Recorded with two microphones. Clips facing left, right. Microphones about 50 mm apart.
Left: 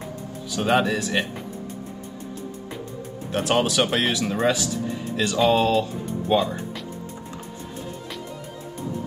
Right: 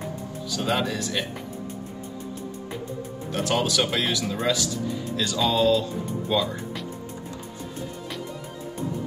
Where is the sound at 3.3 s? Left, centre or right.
Left.